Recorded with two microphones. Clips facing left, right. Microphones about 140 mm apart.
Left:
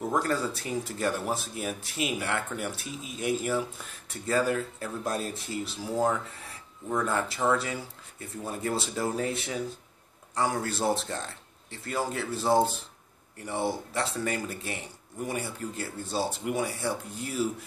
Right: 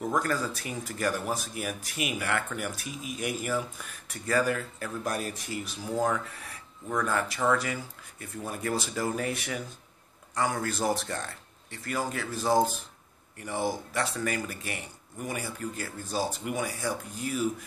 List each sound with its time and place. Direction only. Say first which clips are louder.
0.1 s speech: left 2 dB; 25° left (ahead or behind)